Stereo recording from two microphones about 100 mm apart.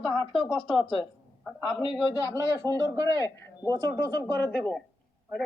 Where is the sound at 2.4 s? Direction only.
35° right (ahead or behind).